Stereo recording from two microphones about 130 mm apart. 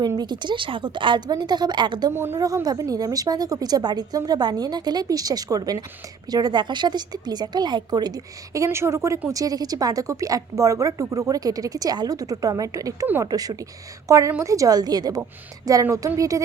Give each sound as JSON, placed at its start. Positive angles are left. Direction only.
{"t": 0.2, "sound": "a woman's voice", "side_deg": -35}
{"t": 2.1, "sound": "a woman's voice", "side_deg": -20}